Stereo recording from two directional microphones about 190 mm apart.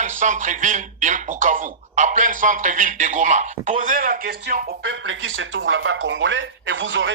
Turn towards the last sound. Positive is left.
turn(degrees=-80)